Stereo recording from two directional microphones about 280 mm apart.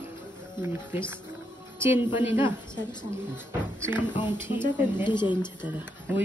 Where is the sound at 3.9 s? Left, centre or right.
Centre.